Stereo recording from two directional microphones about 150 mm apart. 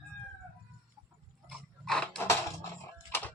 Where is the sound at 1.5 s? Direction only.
5° left (ahead or behind).